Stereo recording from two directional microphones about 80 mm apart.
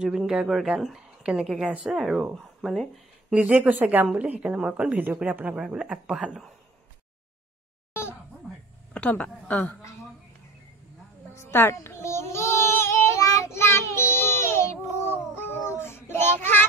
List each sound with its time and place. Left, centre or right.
0.3 s a woman's voice: centre
2.0 s speech: centre
3.3 s a woman's voice: centre
7.9 s a sound: left
8.9 s a woman's voice: centre
11.3 s child singing: left